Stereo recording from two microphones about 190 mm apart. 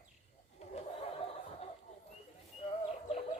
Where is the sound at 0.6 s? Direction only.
35° left (ahead or behind).